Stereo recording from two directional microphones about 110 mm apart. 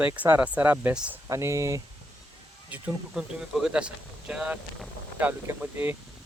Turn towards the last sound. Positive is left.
turn(degrees=-20)  # may be behind; listen again after turning